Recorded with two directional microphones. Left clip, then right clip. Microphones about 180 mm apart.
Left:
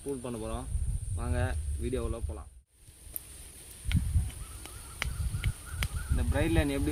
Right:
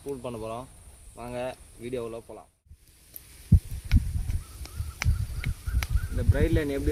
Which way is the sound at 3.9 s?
45° right (ahead or behind).